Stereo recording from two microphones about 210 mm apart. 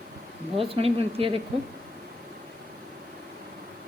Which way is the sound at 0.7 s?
25° right (ahead or behind).